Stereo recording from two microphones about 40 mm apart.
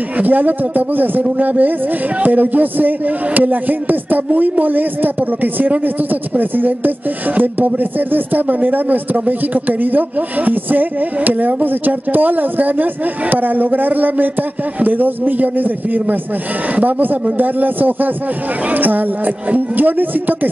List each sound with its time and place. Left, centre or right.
0.2 s a man's voice: right